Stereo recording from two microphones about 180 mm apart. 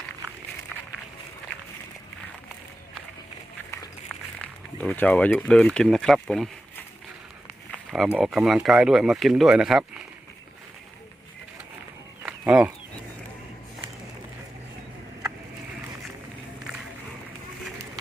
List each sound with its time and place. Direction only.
4.4 s speech: 5° left (ahead or behind)
7.9 s speech: centre (ahead or behind)
12.2 s chicken: 5° right (ahead or behind)